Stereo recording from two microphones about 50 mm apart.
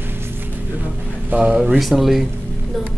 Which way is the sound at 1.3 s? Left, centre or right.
Right.